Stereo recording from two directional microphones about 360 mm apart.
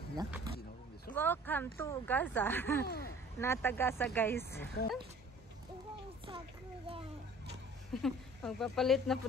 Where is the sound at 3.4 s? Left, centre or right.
Centre.